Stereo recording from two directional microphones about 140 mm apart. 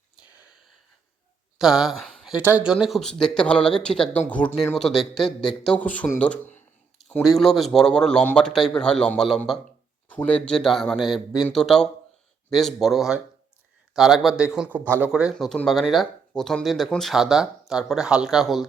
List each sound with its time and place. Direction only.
1.5 s speech: 5° right (ahead or behind)
2.4 s speech: 10° right (ahead or behind)
2.8 s speech: centre (ahead or behind)
7.2 s speech: centre (ahead or behind)
15.1 s speech: 5° right (ahead or behind)